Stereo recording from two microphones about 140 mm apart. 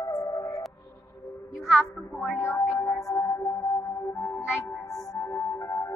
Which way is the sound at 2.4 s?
20° left (ahead or behind).